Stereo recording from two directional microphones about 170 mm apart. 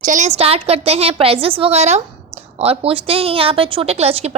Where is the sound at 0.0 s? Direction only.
45° right (ahead or behind).